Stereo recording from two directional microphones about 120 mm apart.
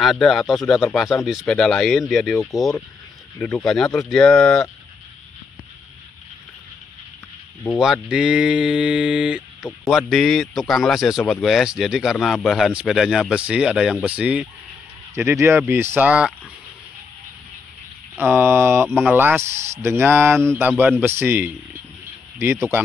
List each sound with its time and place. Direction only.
0.0 s speech: centre (ahead or behind)
3.3 s speech: 20° left (ahead or behind)
3.6 s speech: 5° left (ahead or behind)
7.7 s speech: 5° right (ahead or behind)
15.1 s speech: 20° right (ahead or behind)
18.2 s speech: 20° right (ahead or behind)